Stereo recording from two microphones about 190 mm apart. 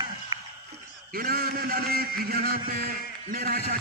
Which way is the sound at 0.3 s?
20° right (ahead or behind).